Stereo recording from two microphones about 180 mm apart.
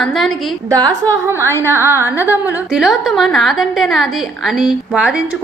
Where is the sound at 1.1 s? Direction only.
15° right (ahead or behind).